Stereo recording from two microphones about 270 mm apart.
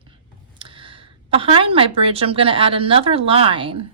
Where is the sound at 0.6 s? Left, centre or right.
Centre.